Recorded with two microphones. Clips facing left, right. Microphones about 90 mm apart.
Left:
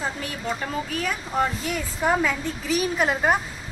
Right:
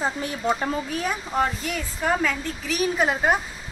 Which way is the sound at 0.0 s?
25° right (ahead or behind).